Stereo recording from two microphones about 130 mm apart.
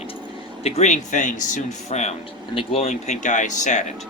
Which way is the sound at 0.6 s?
55° left (ahead or behind).